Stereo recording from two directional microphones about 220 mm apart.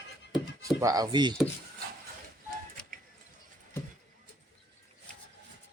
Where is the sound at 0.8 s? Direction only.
15° right (ahead or behind).